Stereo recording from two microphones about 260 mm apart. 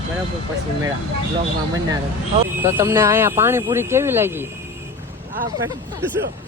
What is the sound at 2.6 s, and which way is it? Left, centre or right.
Speech, centre.